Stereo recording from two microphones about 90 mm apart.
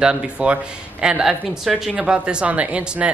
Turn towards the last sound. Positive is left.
turn(degrees=-10)  # may be behind; listen again after turning